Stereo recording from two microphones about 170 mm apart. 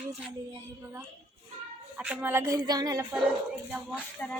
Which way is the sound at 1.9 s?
5° right (ahead or behind).